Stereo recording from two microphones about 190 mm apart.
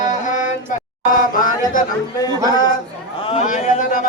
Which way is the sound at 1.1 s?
45° left (ahead or behind).